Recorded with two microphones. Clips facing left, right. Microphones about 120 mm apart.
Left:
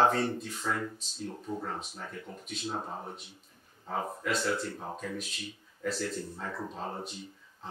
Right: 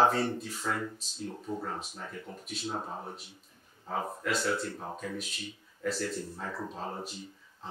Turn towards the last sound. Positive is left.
turn(degrees=0)  # may be behind; listen again after turning